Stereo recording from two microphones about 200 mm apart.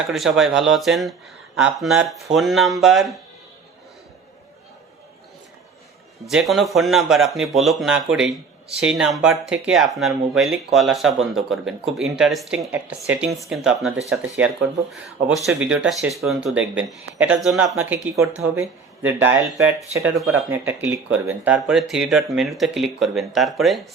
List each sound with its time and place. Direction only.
0.1 s speech: centre (ahead or behind)
6.3 s speech: centre (ahead or behind)